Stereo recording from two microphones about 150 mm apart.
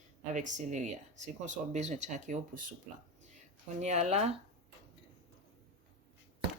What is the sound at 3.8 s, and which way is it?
Speech, 50° right (ahead or behind).